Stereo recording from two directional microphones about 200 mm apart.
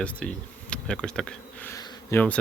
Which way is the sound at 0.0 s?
5° left (ahead or behind).